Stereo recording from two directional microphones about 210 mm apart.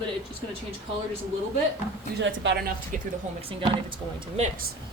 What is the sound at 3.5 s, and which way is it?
Speech, 25° right (ahead or behind).